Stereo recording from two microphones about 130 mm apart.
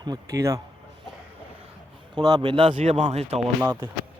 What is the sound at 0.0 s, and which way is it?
Speech, 30° right (ahead or behind).